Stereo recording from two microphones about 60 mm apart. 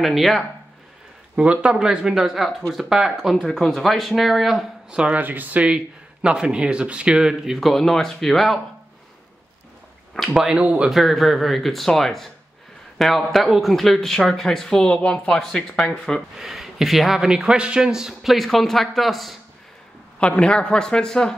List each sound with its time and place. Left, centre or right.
0.0 s speech: centre
1.3 s speech: centre
4.9 s speech: centre
5.2 s speech: right
6.2 s speech: centre
7.6 s speech: centre
10.3 s speech: centre
10.9 s speech: centre
16.3 s speech: centre
20.2 s speech: centre